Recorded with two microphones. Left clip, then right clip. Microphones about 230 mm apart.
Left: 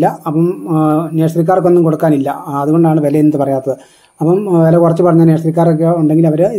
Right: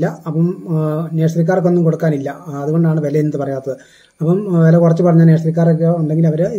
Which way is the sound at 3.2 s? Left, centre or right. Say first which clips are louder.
Left 7 dB; left.